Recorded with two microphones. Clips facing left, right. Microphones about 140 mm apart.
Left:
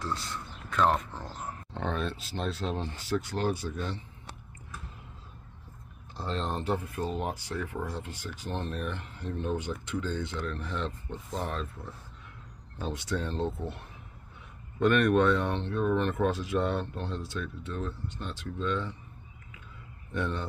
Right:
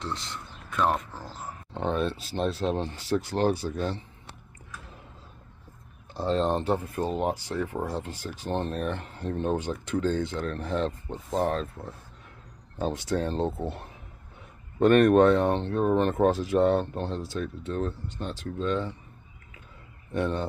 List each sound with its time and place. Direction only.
0.0 s speech: 20° right (ahead or behind)
0.7 s speech: 10° right (ahead or behind)
1.4 s a sound: 15° right (ahead or behind)
2.4 s speech: 50° right (ahead or behind)
2.8 s speech: 30° right (ahead or behind)
6.2 s speech: 30° right (ahead or behind)
20.1 s speech: 35° right (ahead or behind)